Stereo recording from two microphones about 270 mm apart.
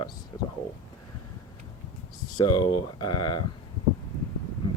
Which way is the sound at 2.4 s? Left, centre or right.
Centre.